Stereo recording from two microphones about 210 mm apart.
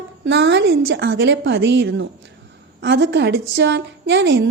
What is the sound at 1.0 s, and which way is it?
A woman's voice, 55° right (ahead or behind).